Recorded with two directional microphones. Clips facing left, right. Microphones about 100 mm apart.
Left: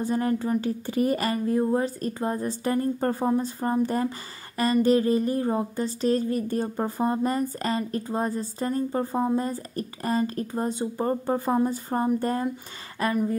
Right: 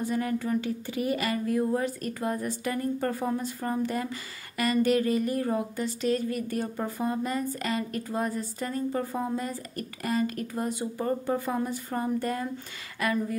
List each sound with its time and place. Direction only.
0.0 s a woman's voice: 35° left (ahead or behind)